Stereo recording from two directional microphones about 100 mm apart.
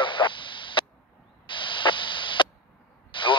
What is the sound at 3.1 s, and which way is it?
Vehicle, 55° left (ahead or behind).